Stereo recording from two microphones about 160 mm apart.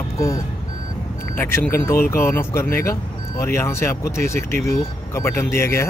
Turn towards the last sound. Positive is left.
turn(degrees=15)  # may be behind; listen again after turning